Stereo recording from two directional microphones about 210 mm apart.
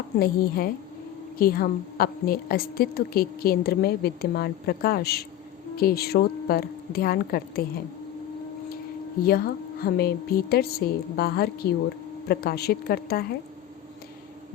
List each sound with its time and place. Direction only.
0.2 s a woman's voice: 45° left (ahead or behind)
9.2 s a woman's voice: 45° left (ahead or behind)